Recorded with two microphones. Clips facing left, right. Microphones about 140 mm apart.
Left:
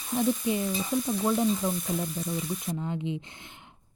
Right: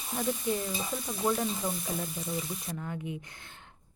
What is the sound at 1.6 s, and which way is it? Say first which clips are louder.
Frying: left 4 dB; centre (ahead or behind).